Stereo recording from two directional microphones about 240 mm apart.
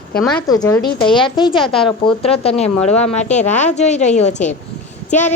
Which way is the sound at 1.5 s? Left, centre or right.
Centre.